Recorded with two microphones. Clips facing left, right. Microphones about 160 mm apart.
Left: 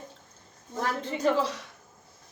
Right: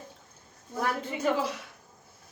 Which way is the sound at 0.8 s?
10° right (ahead or behind).